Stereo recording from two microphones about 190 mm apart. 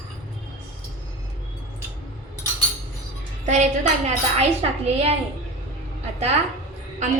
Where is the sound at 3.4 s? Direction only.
40° right (ahead or behind).